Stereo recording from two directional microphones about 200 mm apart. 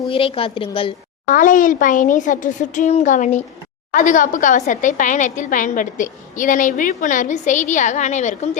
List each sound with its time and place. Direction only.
0.1 s a woman's voice: 25° left (ahead or behind)
1.3 s a woman's voice: 40° left (ahead or behind)